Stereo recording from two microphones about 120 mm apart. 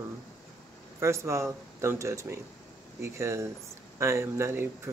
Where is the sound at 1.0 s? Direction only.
25° right (ahead or behind).